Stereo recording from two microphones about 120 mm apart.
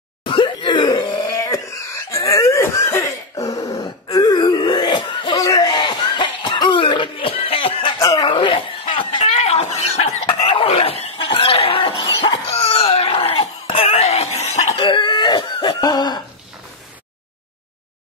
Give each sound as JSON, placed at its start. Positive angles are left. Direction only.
{"t": 0.2, "sound": "throat clearing", "side_deg": 45}
{"t": 2.0, "sound": "cough", "side_deg": 25}
{"t": 4.1, "sound": "throat clearing", "side_deg": 35}
{"t": 5.5, "sound": "cough", "side_deg": 35}
{"t": 8.0, "sound": "a sound", "side_deg": 35}
{"t": 8.3, "sound": "chuckle", "side_deg": 45}
{"t": 14.8, "sound": "cough", "side_deg": 40}